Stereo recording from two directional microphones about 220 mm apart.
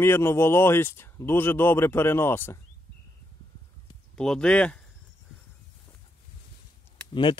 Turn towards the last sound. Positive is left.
turn(degrees=20)  # may be behind; listen again after turning